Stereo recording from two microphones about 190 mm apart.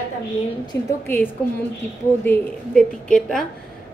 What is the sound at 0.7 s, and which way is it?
Speech, 15° left (ahead or behind).